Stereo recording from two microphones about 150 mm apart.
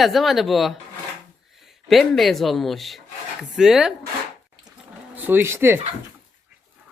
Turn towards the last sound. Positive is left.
turn(degrees=-15)  # may be behind; listen again after turning